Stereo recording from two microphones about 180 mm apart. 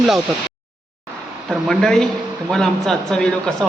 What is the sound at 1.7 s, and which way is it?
Speech, 5° left (ahead or behind).